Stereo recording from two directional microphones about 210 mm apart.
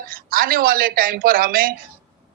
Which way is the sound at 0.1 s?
45° right (ahead or behind).